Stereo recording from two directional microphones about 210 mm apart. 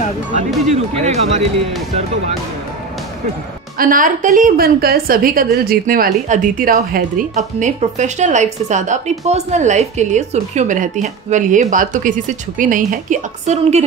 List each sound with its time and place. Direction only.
0.7 s a woman's voice: 30° right (ahead or behind)
3.7 s a woman's voice: 40° right (ahead or behind)